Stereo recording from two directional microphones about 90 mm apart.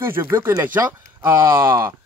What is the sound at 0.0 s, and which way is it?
Speech, 25° right (ahead or behind).